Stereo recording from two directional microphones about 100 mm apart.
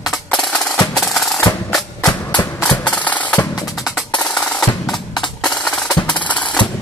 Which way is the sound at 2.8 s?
15° left (ahead or behind).